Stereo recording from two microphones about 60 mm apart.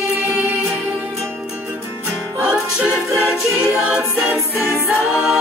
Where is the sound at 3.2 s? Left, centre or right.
Centre.